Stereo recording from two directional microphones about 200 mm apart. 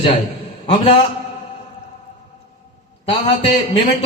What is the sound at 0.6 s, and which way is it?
Speech, 30° left (ahead or behind).